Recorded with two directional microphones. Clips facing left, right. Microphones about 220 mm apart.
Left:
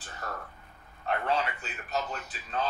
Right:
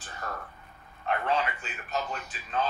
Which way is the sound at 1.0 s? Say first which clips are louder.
Right 1 dB; 40° left (ahead or behind).